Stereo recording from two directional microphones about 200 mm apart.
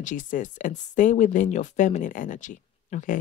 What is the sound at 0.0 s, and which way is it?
Speech, 40° left (ahead or behind).